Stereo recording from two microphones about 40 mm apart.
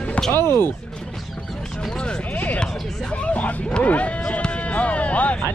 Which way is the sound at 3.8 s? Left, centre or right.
Left.